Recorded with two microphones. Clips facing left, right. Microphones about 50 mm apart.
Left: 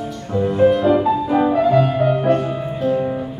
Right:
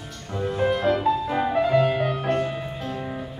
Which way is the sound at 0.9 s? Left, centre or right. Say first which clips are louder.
Left 6 dB; centre.